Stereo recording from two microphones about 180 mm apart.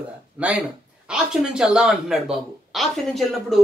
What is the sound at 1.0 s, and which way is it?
Speech, 5° right (ahead or behind).